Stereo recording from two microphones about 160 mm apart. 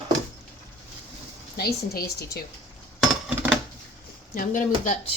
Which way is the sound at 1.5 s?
75° left (ahead or behind).